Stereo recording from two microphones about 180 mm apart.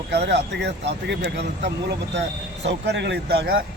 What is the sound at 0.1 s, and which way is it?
Speech, 75° right (ahead or behind).